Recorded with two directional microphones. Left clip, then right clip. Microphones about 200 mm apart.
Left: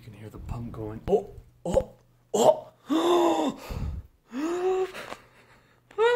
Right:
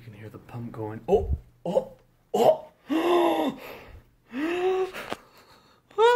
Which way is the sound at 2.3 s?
25° left (ahead or behind).